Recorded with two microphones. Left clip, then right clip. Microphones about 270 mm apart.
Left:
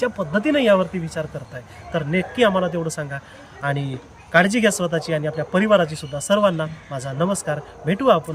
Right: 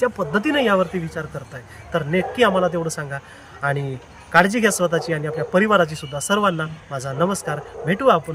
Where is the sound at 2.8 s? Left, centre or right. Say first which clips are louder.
Right 1 dB; centre.